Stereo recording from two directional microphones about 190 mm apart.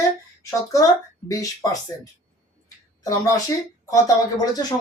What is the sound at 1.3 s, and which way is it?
Speech, 15° left (ahead or behind).